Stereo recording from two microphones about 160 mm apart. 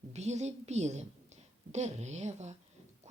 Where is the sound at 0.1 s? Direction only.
45° right (ahead or behind).